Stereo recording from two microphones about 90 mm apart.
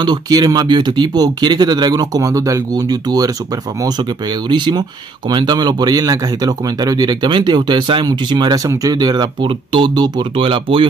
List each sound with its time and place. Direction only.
0.0 s speech: 50° right (ahead or behind)
4.5 s speech: 55° right (ahead or behind)
8.6 s speech: 45° right (ahead or behind)
10.3 s speech: 85° right